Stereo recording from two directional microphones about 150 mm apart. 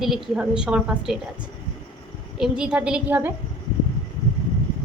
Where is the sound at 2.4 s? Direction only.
5° right (ahead or behind).